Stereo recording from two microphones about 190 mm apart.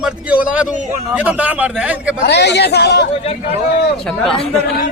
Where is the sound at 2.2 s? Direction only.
60° left (ahead or behind).